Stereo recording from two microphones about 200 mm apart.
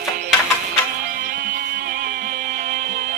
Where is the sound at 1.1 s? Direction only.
50° right (ahead or behind).